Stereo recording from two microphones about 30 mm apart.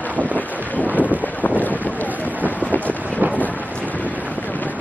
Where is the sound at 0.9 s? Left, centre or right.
Left.